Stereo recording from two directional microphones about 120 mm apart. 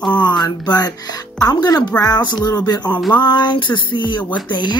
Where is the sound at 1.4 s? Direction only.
30° left (ahead or behind).